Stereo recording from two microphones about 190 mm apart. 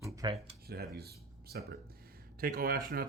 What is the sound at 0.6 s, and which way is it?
Speech, 55° right (ahead or behind).